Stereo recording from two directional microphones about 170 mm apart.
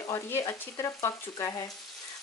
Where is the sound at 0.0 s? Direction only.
20° left (ahead or behind).